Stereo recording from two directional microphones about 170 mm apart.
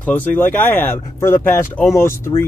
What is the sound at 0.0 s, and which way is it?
Speech, 10° left (ahead or behind).